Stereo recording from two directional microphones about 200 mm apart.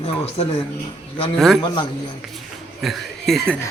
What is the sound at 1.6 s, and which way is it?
Speech, 20° left (ahead or behind).